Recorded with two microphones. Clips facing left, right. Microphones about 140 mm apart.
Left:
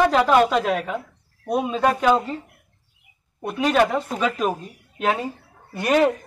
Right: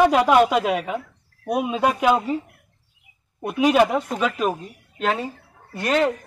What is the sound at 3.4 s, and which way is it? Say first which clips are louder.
Speech: right 2 dB; 10° right (ahead or behind).